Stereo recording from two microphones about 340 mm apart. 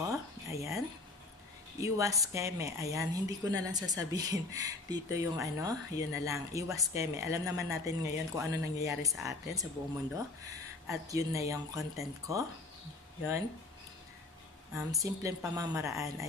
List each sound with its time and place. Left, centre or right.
0.1 s a sound: centre
1.8 s speech: centre
10.9 s speech: centre
14.7 s speech: centre